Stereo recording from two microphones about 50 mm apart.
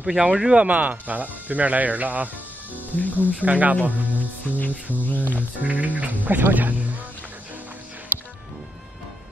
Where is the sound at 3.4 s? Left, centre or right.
Right.